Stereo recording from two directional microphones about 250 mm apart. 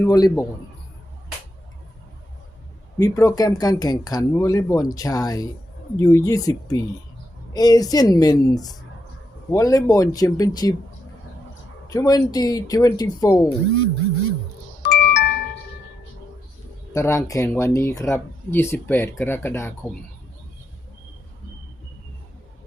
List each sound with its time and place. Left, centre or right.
0.0 s speech: centre
3.0 s speech: centre
11.9 s speech: centre
14.8 s music: left
16.9 s speech: centre